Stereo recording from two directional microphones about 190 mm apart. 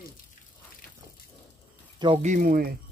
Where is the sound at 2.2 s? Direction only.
45° right (ahead or behind).